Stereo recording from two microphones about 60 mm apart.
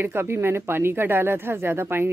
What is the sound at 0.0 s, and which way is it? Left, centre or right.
Speech, right.